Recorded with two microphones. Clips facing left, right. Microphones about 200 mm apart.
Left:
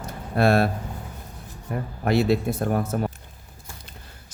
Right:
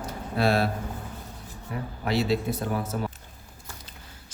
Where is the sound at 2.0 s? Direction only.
55° left (ahead or behind).